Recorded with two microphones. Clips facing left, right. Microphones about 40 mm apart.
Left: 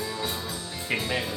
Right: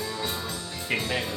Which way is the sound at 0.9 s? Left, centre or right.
Centre.